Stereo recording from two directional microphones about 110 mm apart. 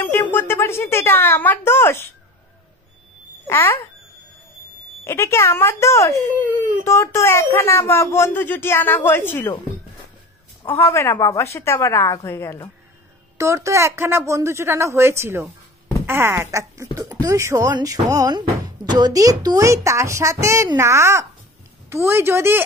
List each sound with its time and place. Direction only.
0.0 s speech: 15° left (ahead or behind)
3.4 s speech: 20° left (ahead or behind)
5.0 s speech: 25° left (ahead or behind)
10.7 s speech: 25° left (ahead or behind)
13.4 s speech: 25° right (ahead or behind)